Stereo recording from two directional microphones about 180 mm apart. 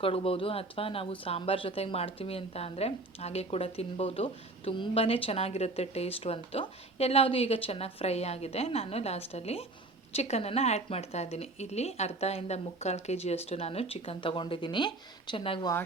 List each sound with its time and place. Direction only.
0.0 s speech: 30° left (ahead or behind)